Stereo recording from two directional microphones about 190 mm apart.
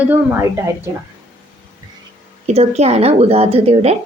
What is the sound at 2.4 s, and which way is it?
A woman's voice, 35° right (ahead or behind).